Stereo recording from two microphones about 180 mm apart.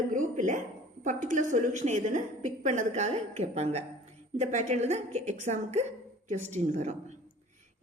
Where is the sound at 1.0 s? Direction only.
45° right (ahead or behind).